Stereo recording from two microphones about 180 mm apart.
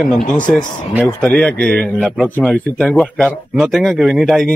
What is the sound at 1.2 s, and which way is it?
A man's voice, 5° left (ahead or behind).